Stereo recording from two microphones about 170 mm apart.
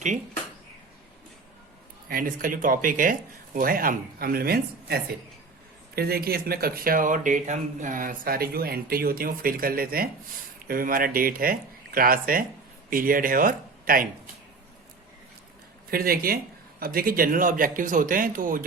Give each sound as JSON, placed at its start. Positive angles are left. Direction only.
{"t": 2.0, "sound": "speech", "side_deg": -55}
{"t": 15.9, "sound": "speech", "side_deg": -60}